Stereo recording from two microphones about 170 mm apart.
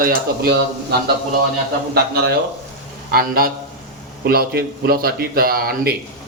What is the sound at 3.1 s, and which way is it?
Stir, 60° right (ahead or behind).